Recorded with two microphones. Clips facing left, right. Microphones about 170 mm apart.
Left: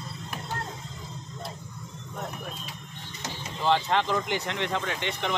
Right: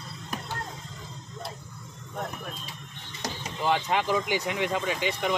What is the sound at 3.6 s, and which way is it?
Speech, 10° right (ahead or behind).